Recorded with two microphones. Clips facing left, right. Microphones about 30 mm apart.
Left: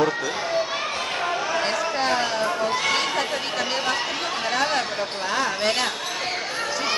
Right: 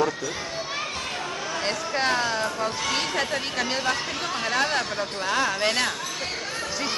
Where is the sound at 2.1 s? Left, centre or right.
Centre.